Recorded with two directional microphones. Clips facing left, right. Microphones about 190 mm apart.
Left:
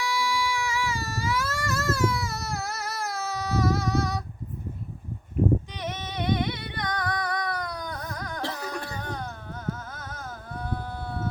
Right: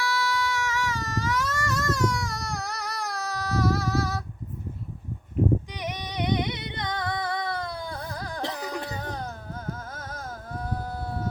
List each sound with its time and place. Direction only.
0.0 s baby cry: 10° left (ahead or behind)
5.7 s singing: 15° right (ahead or behind); by 8.4 s 30° right (ahead or behind)
8.4 s music: 15° right (ahead or behind)
9.9 s a sound: 35° right (ahead or behind)
10.7 s sheep: 40° right (ahead or behind)